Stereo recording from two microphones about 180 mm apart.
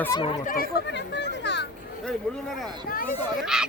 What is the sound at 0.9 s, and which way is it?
Speech, 75° left (ahead or behind).